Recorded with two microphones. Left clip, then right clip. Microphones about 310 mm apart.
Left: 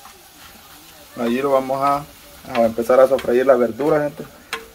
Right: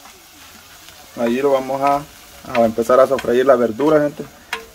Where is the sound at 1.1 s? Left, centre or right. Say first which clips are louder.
Right 2 dB; centre.